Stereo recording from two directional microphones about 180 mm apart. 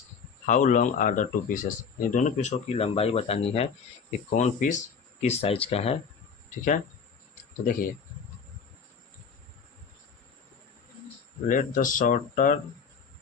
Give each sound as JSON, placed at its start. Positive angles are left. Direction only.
{"t": 0.4, "sound": "speech", "side_deg": 45}
{"t": 7.6, "sound": "speech", "side_deg": 50}
{"t": 11.4, "sound": "speech", "side_deg": 50}